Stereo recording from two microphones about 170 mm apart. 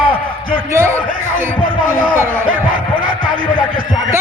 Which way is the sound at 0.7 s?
15° right (ahead or behind).